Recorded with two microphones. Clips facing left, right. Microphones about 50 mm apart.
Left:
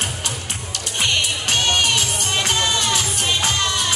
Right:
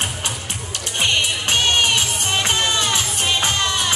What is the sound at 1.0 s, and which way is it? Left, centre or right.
Music, centre.